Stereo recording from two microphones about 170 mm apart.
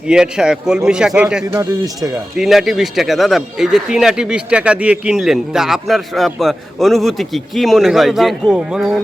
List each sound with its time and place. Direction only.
0.1 s speech: 5° right (ahead or behind)
1.5 s speech: 20° right (ahead or behind)
2.3 s speech: centre (ahead or behind)